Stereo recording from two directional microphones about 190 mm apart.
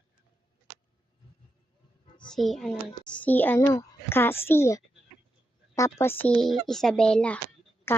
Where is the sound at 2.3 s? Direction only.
Centre (ahead or behind).